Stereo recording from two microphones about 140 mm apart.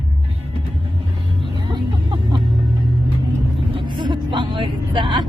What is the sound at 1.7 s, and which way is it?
Music, 35° right (ahead or behind).